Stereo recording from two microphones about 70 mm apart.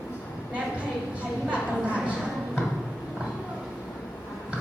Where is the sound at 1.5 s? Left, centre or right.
Centre.